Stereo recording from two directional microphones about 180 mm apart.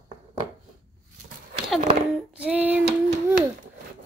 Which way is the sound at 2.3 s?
5° right (ahead or behind).